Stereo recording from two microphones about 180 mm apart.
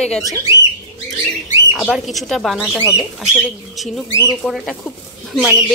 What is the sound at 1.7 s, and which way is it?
Speech, centre (ahead or behind).